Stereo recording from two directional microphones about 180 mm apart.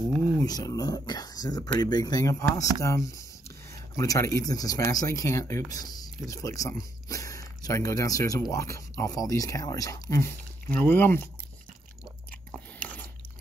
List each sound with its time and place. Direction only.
0.4 s speech: 20° left (ahead or behind)
12.4 s biting: 5° left (ahead or behind)